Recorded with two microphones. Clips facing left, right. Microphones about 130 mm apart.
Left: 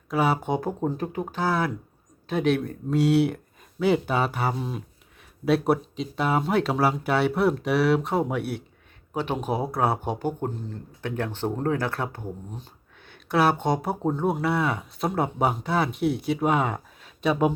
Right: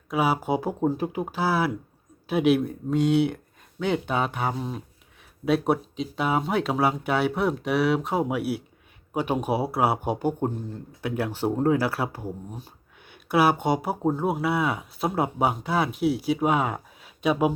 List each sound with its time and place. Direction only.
0.1 s speech: 5° right (ahead or behind)